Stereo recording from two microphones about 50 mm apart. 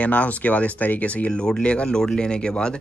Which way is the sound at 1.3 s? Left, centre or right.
Centre.